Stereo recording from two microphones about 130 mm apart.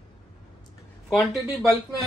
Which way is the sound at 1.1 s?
Centre (ahead or behind).